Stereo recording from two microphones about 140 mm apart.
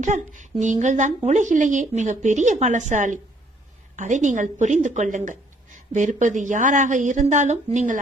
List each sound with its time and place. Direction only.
0.0 s a woman's voice: 60° right (ahead or behind)